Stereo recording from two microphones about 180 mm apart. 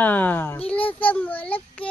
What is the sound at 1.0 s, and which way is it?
Speech, 10° left (ahead or behind).